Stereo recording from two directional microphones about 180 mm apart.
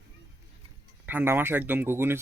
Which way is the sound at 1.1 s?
10° right (ahead or behind).